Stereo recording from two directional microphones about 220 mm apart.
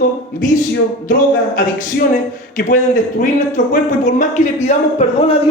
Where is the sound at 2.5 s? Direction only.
35° left (ahead or behind).